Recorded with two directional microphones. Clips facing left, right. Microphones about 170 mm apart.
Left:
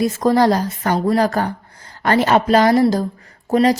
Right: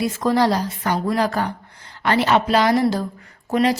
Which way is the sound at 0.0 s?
45° left (ahead or behind).